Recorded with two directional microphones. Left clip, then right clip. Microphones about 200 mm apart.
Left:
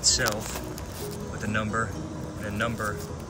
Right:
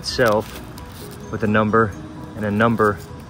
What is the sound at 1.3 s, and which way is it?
Speech, 15° right (ahead or behind).